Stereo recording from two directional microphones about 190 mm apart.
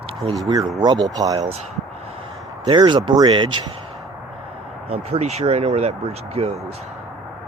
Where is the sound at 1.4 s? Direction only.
35° right (ahead or behind).